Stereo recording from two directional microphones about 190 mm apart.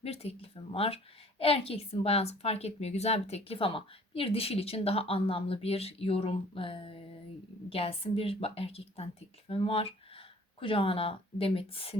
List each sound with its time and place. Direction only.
0.0 s a woman's voice: 30° left (ahead or behind)